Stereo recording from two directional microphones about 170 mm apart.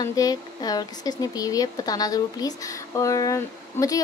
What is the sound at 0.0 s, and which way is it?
Speech, 20° left (ahead or behind).